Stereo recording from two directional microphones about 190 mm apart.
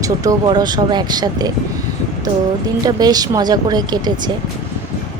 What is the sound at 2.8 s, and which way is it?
Speech, 20° right (ahead or behind).